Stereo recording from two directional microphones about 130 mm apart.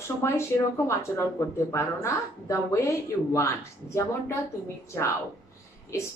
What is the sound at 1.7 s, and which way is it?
A woman's voice, 20° left (ahead or behind).